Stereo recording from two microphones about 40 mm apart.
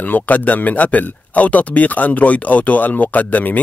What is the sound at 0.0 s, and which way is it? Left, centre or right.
Speech, left.